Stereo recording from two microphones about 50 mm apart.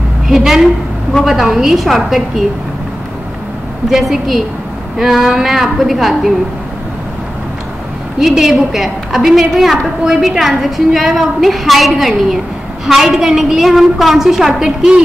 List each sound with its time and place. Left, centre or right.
0.4 s a woman's voice: centre
3.9 s a woman's voice: centre
8.2 s a woman's voice: centre
14.5 s a woman's voice: centre